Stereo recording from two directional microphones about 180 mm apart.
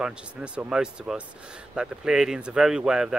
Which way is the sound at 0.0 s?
5° right (ahead or behind).